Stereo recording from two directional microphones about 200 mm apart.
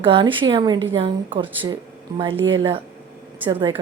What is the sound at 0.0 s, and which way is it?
Speech, 25° right (ahead or behind).